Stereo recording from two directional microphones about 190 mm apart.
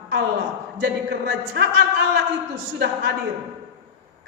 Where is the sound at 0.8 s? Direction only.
60° right (ahead or behind).